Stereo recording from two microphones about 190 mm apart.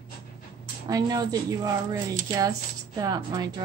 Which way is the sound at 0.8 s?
20° right (ahead or behind).